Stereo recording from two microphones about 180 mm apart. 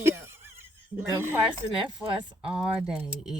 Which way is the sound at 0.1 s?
15° right (ahead or behind).